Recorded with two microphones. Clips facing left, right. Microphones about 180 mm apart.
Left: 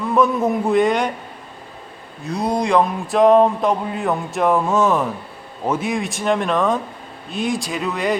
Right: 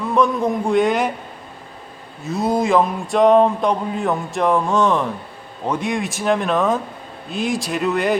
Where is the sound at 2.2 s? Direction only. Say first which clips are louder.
Right 2 dB; centre (ahead or behind).